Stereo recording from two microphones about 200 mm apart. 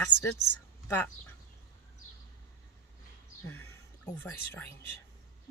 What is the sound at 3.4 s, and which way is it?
Speech, 90° left.